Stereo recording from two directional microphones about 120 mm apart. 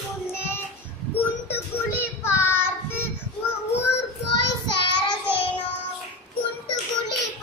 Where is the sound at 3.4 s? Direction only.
20° left (ahead or behind).